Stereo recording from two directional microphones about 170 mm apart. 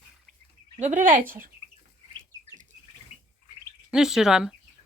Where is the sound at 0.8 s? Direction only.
50° right (ahead or behind).